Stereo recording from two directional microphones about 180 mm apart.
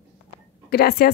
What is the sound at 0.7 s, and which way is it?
Speech, 60° left (ahead or behind).